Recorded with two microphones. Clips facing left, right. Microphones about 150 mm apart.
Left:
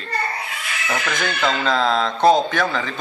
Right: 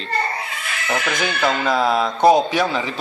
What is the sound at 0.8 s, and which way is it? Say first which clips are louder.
Speech: right 2 dB; 15° right (ahead or behind).